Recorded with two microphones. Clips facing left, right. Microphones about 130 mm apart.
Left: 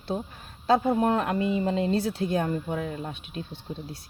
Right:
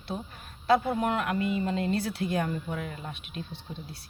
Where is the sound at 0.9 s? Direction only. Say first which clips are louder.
Left 4 dB; 35° left (ahead or behind).